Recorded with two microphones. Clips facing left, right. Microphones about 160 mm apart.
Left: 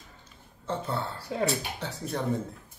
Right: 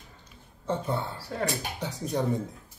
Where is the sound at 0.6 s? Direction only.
15° right (ahead or behind).